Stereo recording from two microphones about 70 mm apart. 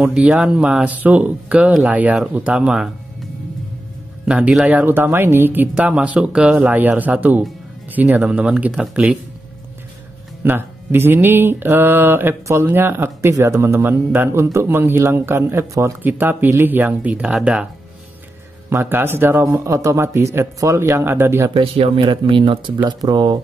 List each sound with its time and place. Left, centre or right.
0.0 s speech: centre
4.3 s speech: centre
5.8 s speech: centre
10.4 s speech: right
17.1 s speech: centre
18.7 s speech: right
22.8 s speech: right